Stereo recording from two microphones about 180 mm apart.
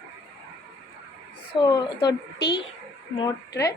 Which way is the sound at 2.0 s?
65° left (ahead or behind).